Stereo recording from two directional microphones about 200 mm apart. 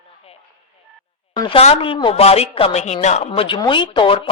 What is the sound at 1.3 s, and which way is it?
A woman's voice, 25° left (ahead or behind).